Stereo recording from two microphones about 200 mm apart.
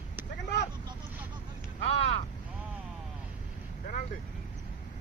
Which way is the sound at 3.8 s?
45° left (ahead or behind).